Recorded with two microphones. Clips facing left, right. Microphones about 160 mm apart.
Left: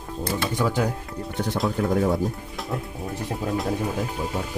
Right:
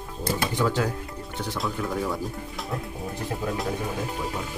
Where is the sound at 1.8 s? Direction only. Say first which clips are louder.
Left 8 dB; 50° left (ahead or behind).